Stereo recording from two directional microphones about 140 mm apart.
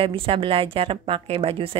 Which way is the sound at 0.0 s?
40° right (ahead or behind).